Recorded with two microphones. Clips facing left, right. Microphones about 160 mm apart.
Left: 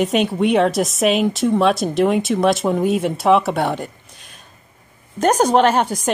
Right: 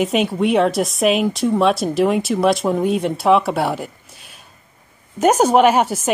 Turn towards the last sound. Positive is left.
turn(degrees=-5)  # may be behind; listen again after turning